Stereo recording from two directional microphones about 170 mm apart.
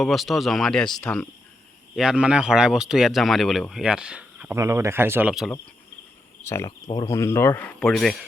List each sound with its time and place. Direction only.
0.0 s speech: centre (ahead or behind)
4.5 s speech: 15° right (ahead or behind)
6.4 s speech: 15° left (ahead or behind)